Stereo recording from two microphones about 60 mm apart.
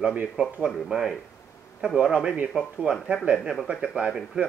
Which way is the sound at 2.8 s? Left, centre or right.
Right.